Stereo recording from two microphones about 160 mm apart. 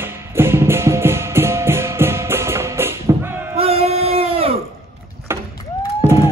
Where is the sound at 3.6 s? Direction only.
40° right (ahead or behind).